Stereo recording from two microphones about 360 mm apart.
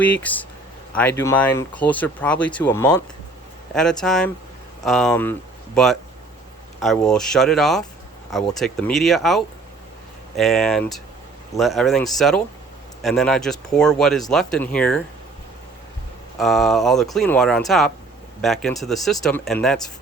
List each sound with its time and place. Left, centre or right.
0.0 s speech: centre
16.4 s speech: centre